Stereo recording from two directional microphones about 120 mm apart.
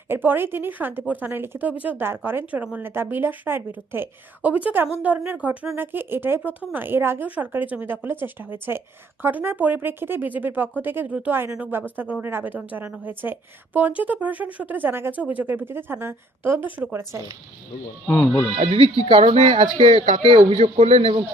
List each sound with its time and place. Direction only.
0.1 s speech: 15° right (ahead or behind)
18.1 s speech: 10° left (ahead or behind)
18.5 s speech: 45° right (ahead or behind)
20.6 s speech: 65° right (ahead or behind)